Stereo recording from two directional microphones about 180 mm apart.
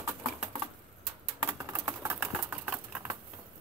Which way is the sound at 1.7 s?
15° right (ahead or behind).